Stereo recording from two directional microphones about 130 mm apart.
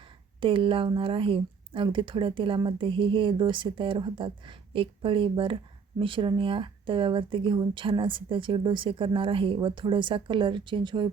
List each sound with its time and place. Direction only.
0.3 s a woman's voice: 45° right (ahead or behind)